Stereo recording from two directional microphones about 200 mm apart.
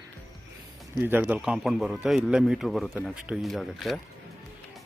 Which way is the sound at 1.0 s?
10° right (ahead or behind).